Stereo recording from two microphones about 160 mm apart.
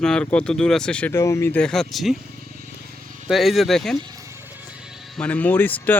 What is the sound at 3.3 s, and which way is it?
Speech, centre (ahead or behind).